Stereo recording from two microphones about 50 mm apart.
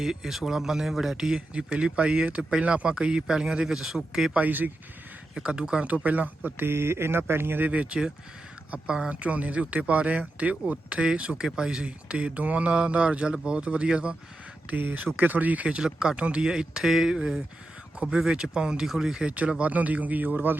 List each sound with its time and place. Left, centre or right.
0.0 s speech: centre
1.4 s speech: right; by 4.3 s centre
4.4 s speech: right
5.3 s speech: centre
5.9 s speech: right
6.7 s speech: right
7.7 s speech: right
14.7 s speech: right
15.8 s speech: centre; by 20.6 s right